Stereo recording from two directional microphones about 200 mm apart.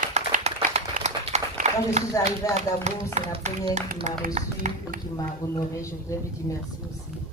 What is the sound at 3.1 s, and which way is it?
Speech, 35° right (ahead or behind).